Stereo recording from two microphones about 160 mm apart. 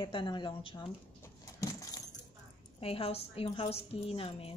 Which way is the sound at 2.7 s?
35° left (ahead or behind).